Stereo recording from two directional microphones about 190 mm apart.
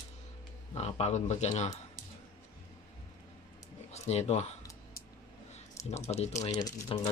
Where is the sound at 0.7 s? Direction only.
35° left (ahead or behind).